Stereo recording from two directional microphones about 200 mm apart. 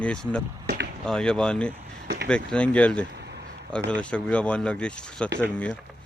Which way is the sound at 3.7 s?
5° left (ahead or behind).